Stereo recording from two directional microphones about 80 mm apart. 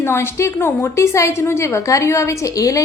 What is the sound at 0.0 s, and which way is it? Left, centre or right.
A woman's voice, left.